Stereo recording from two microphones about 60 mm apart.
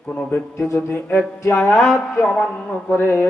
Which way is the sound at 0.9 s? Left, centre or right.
Left.